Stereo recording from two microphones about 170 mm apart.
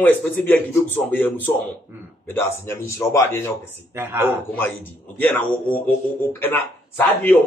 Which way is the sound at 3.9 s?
15° right (ahead or behind).